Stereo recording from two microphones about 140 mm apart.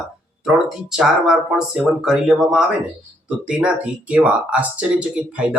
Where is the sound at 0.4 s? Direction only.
5° right (ahead or behind).